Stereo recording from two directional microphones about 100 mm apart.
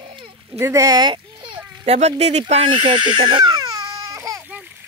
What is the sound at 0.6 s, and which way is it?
A child's voice, 30° right (ahead or behind).